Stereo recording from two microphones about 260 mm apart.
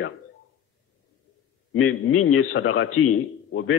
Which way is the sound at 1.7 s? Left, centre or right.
Left.